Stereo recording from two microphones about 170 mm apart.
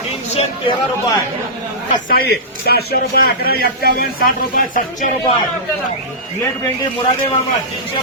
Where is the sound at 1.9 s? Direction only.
60° left (ahead or behind).